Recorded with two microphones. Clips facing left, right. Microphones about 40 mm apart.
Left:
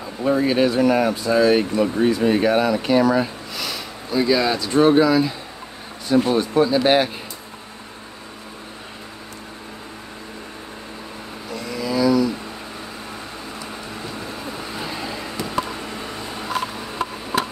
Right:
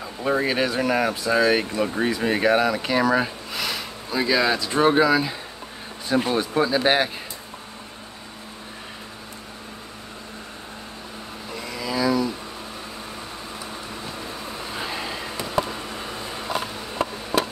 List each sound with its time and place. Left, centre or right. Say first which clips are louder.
0.2 s speech: left 4 dB; centre
6.0 s speech: left 4 dB; right
6.3 s speech: left 4 dB; centre
11.5 s vehicle: left 4 dB; centre
15.0 s vehicle: left 2 dB; centre
16.5 s a sound: left 2 dB; centre